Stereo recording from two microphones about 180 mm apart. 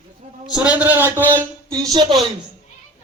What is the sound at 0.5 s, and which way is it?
A man's voice, 5° right (ahead or behind).